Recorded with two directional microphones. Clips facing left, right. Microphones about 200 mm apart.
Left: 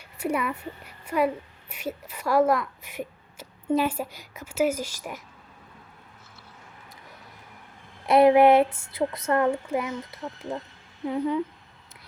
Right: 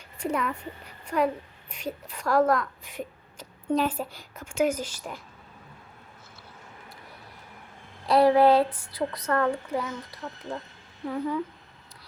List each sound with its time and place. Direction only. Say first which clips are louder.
0.2 s speech: left 1 dB; 10° left (ahead or behind)
8.0 s speech: left 2 dB; 20° left (ahead or behind)